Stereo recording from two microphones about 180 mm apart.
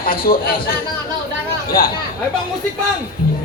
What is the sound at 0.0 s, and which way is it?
Speech, 55° left (ahead or behind).